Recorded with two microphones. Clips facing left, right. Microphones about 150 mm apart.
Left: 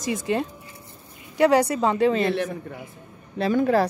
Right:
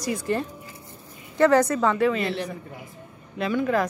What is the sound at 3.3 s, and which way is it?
Speech, 35° left (ahead or behind).